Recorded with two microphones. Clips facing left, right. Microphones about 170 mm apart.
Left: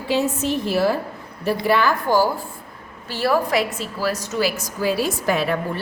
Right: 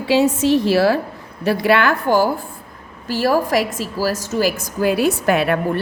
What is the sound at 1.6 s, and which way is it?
Speech, 70° right (ahead or behind).